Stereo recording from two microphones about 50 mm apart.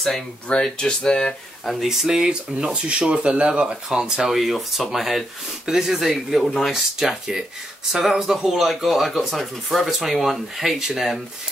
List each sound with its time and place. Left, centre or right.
0.7 s speech: centre
1.7 s speech: centre
2.7 s speech: right; by 11.1 s centre